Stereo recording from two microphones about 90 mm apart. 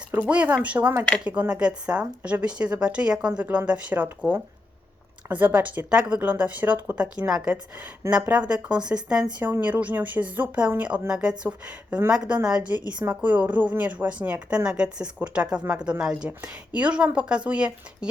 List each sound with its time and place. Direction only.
0.1 s speech: 15° right (ahead or behind)
5.3 s speech: 20° right (ahead or behind)